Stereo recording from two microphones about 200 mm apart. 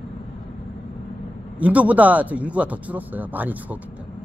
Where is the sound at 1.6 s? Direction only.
5° right (ahead or behind).